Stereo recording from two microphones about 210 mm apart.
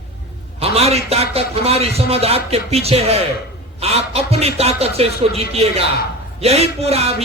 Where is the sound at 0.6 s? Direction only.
30° right (ahead or behind).